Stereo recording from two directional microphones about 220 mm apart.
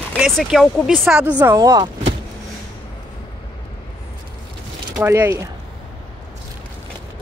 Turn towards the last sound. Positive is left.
turn(degrees=-10)  # may be behind; listen again after turning